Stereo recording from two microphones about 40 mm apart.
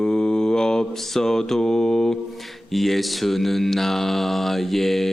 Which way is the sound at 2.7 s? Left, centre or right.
Centre.